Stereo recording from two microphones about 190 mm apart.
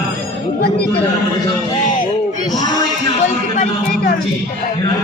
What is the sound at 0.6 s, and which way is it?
Speech, 55° left (ahead or behind).